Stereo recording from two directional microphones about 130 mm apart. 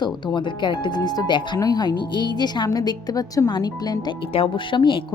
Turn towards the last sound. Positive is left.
turn(degrees=40)  # may be behind; listen again after turning